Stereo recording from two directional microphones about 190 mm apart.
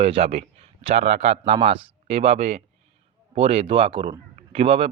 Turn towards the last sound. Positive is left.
turn(degrees=-30)  # may be behind; listen again after turning